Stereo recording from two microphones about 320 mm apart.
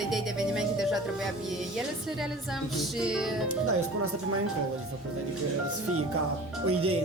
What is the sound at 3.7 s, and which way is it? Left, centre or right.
Speech, right.